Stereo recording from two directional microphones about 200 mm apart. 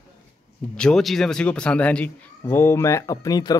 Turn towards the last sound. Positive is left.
turn(degrees=20)  # may be behind; listen again after turning